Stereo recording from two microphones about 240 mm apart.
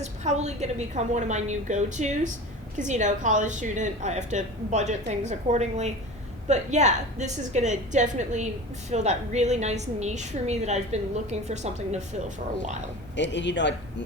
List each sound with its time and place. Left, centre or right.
0.0 s a woman's voice: right
13.1 s speech: left